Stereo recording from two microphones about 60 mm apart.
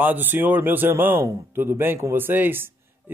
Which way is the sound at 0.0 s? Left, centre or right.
Right.